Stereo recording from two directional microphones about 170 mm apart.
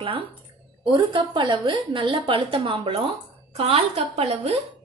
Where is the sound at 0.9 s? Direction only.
25° right (ahead or behind).